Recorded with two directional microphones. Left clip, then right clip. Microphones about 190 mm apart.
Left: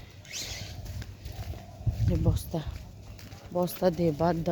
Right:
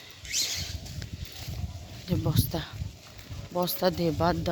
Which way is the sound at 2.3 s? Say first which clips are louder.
Right 4 dB; centre (ahead or behind).